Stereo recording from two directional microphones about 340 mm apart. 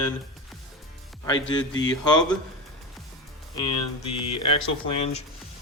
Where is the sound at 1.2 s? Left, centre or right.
Centre.